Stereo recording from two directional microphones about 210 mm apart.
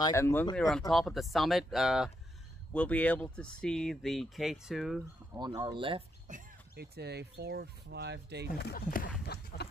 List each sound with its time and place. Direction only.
0.0 s speech: 15° left (ahead or behind)
5.3 s speech: 20° right (ahead or behind)
6.2 s speech: 45° right (ahead or behind)
8.5 s speech: 50° left (ahead or behind)
9.2 s a sound: 50° left (ahead or behind)